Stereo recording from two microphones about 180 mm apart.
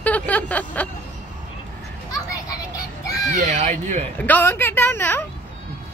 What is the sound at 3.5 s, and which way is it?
Speech, 40° right (ahead or behind).